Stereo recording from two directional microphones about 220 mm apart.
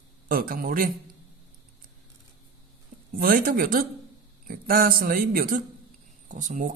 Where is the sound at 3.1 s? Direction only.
40° right (ahead or behind).